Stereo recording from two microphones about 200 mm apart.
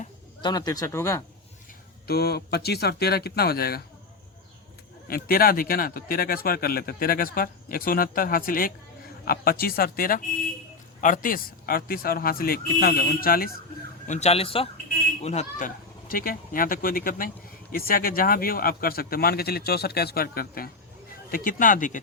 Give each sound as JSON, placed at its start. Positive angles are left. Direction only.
{"t": 0.4, "sound": "speech", "side_deg": 20}
{"t": 2.0, "sound": "speech", "side_deg": 50}
{"t": 5.0, "sound": "speech", "side_deg": 50}
{"t": 14.1, "sound": "speech", "side_deg": 30}